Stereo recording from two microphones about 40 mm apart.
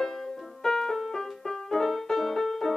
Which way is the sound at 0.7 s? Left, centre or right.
Centre.